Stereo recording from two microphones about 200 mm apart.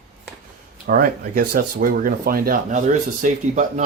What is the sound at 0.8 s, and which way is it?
Speech, 45° right (ahead or behind).